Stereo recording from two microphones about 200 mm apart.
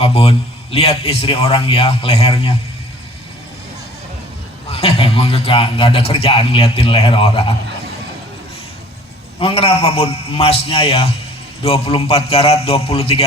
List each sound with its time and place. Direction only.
0.0 s a man's voice: 25° left (ahead or behind)
4.7 s a man's voice: 30° left (ahead or behind)
9.4 s a man's voice: 30° left (ahead or behind)